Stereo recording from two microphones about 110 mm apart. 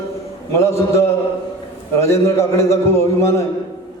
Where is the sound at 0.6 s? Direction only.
25° left (ahead or behind).